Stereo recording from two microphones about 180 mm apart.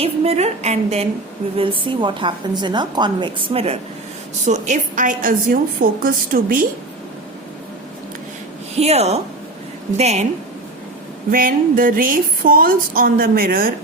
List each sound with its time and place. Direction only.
0.0 s a woman's voice: 35° right (ahead or behind); by 6.7 s 50° right (ahead or behind)
8.8 s a woman's voice: 35° right (ahead or behind)
11.3 s a woman's voice: 50° right (ahead or behind)